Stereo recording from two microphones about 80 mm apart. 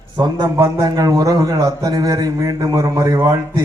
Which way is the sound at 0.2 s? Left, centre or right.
Right.